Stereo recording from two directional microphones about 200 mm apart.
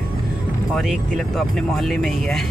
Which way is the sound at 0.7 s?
Centre (ahead or behind).